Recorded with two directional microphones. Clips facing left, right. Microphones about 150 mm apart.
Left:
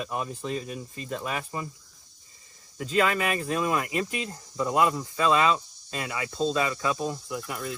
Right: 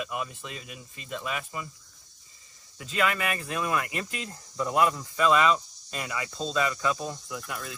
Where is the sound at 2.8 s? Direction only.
40° left (ahead or behind).